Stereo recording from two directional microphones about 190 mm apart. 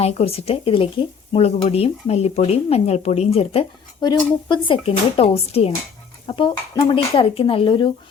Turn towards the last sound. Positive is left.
turn(degrees=25)  # may be behind; listen again after turning